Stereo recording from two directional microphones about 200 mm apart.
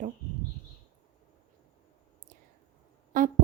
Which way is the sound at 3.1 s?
40° right (ahead or behind).